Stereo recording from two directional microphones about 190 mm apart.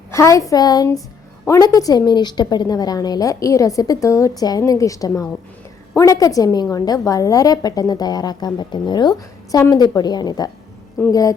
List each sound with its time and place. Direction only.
0.1 s a woman's voice: 15° left (ahead or behind)